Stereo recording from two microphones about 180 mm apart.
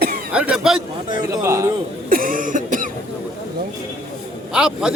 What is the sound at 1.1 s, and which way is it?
Speech, 20° right (ahead or behind).